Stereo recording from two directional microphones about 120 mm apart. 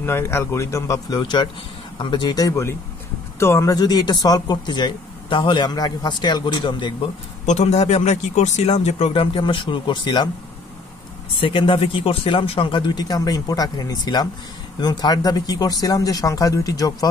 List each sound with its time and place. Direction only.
0.0 s speech: 20° left (ahead or behind); by 6.9 s 40° left (ahead or behind)
7.4 s speech: 70° left (ahead or behind)
9.1 s speech: 45° left (ahead or behind)
11.4 s speech: 45° left (ahead or behind)